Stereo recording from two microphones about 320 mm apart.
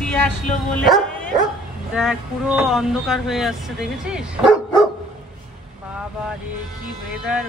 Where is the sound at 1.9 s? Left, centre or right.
Centre.